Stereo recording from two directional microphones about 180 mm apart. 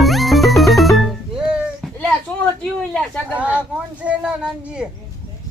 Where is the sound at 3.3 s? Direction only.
5° right (ahead or behind).